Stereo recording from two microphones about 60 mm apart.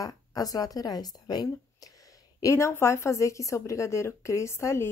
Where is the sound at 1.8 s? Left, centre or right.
Left.